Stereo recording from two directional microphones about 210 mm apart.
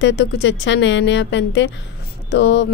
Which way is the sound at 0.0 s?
55° left (ahead or behind).